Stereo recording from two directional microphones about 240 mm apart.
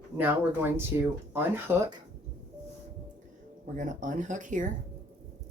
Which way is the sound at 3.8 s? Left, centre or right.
Right.